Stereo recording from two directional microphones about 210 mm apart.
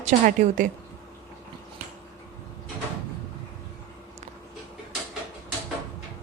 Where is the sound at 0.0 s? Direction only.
35° right (ahead or behind).